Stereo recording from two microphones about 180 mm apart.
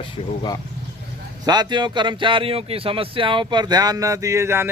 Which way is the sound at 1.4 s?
25° right (ahead or behind).